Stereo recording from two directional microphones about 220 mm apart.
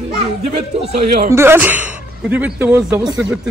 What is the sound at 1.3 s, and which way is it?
Speech, 10° right (ahead or behind).